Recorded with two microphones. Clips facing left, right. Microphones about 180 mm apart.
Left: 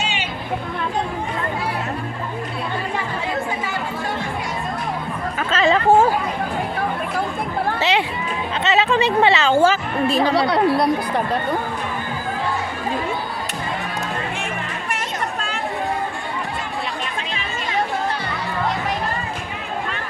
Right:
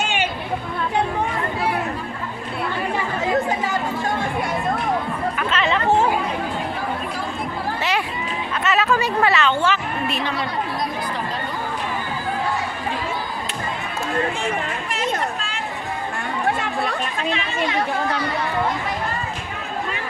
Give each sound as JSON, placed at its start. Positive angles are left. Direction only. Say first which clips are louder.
{"t": 0.0, "sound": "chatter", "louder": "right 3 dB", "side_deg": -50}
{"t": 5.6, "sound": "chatter", "louder": "left 5 dB", "side_deg": 45}
{"t": 8.7, "sound": "speech", "louder": "left 3 dB", "side_deg": 20}
{"t": 9.5, "sound": "a woman's voice", "louder": "left 5 dB", "side_deg": 40}
{"t": 10.5, "sound": "speech", "louder": "left 9 dB", "side_deg": 65}
{"t": 16.5, "sound": "chatter", "louder": "right 5 dB", "side_deg": -60}